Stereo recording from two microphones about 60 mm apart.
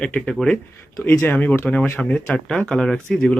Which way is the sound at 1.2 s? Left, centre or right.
Left.